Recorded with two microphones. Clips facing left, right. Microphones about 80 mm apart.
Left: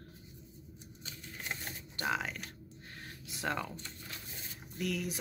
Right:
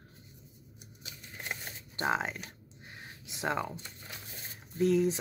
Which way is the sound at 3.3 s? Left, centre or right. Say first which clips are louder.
Right 4 dB; right.